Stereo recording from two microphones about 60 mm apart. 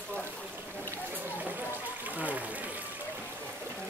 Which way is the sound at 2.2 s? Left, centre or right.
Right.